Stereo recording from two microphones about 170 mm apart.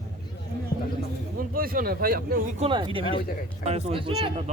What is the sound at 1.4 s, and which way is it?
Speech, 60° right (ahead or behind).